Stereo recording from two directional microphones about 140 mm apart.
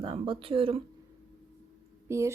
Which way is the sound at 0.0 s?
40° right (ahead or behind).